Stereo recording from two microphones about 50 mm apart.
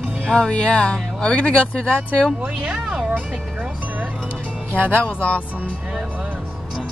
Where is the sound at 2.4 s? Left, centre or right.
Centre.